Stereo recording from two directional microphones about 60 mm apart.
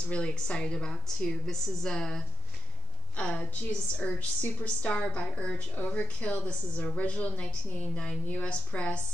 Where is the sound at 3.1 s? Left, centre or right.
Left.